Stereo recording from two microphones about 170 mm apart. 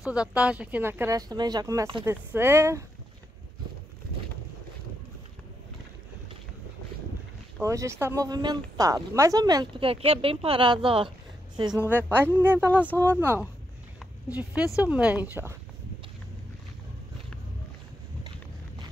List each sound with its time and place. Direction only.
0.0 s speech: 5° right (ahead or behind)
7.6 s a woman's voice: 15° right (ahead or behind)
11.9 s speech: 10° right (ahead or behind)